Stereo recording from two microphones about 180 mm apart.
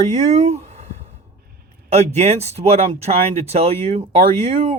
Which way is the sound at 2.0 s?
35° right (ahead or behind).